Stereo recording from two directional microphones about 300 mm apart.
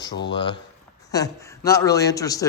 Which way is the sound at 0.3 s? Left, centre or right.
Centre.